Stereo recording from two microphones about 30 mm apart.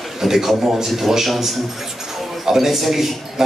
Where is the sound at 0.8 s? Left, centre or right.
Centre.